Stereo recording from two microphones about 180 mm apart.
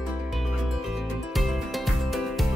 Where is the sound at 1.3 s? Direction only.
Centre (ahead or behind).